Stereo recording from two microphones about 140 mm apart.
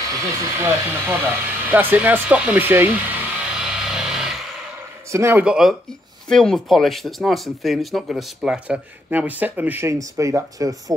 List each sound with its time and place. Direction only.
0.1 s speech: 20° right (ahead or behind)
1.7 s a sound: 15° right (ahead or behind)
5.1 s speech: 20° right (ahead or behind)
5.4 s speech: 5° right (ahead or behind); by 10.8 s 25° right (ahead or behind)